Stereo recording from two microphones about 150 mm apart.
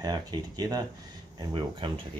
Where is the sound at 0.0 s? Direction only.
25° right (ahead or behind).